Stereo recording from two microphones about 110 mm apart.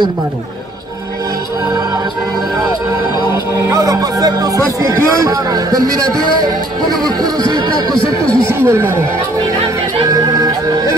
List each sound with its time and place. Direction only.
3.5 s speech: 30° right (ahead or behind)
8.0 s speech: 50° left (ahead or behind)
8.5 s speech: 25° right (ahead or behind)
10.0 s music: 30° right (ahead or behind)